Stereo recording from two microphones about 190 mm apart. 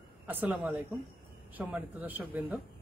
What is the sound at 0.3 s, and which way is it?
Speech, 10° right (ahead or behind).